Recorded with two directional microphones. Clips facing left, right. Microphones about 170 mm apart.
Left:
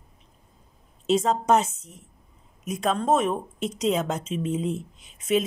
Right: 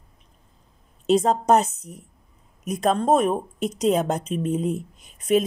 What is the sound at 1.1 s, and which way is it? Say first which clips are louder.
Speech: right 3 dB; 35° right (ahead or behind).